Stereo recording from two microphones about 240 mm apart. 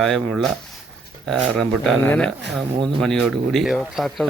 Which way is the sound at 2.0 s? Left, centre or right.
Centre.